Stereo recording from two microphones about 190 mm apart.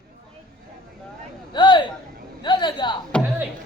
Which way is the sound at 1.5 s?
25° left (ahead or behind).